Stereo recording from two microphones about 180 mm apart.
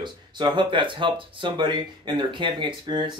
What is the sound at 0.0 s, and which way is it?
Speech, 25° right (ahead or behind).